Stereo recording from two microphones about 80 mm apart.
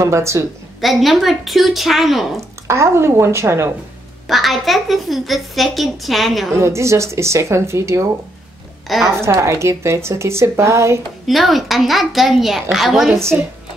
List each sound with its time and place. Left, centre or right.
0.0 s a woman's voice: right
0.7 s a woman's voice: centre
2.7 s a woman's voice: right
4.3 s a woman's voice: centre
6.5 s a woman's voice: right
8.8 s a woman's voice: centre
9.2 s a woman's voice: right
11.2 s a woman's voice: centre